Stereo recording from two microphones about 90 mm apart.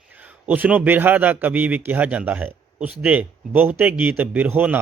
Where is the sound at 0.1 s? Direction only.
20° right (ahead or behind).